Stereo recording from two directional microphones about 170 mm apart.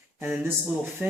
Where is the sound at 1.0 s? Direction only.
5° right (ahead or behind).